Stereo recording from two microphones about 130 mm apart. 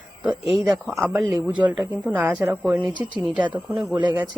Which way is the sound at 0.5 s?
Centre (ahead or behind).